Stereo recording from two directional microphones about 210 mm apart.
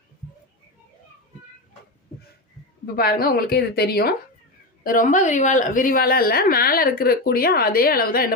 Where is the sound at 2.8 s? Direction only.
45° left (ahead or behind).